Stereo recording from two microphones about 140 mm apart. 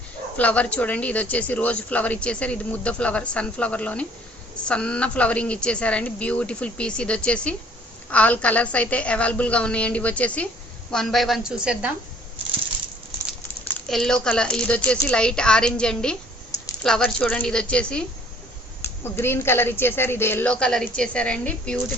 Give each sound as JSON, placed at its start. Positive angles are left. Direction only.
{"t": 0.3, "sound": "speech", "side_deg": 10}
{"t": 13.8, "sound": "speech", "side_deg": 5}